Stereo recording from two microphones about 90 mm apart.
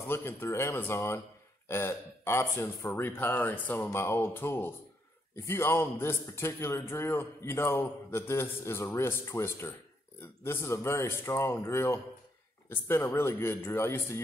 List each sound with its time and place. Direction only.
0.1 s speech: 25° left (ahead or behind)